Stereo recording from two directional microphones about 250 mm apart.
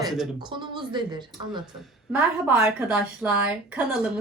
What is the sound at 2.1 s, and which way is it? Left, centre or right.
A woman's voice, centre.